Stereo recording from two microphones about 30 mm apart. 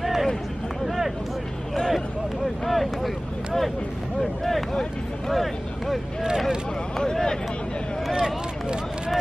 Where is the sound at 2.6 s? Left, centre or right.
Centre.